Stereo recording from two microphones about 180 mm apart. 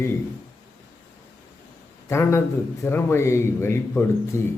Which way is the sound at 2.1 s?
15° left (ahead or behind).